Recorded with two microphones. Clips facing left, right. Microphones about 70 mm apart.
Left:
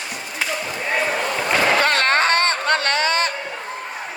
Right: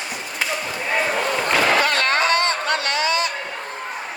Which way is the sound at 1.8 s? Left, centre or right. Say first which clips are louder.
Left 1 dB; left.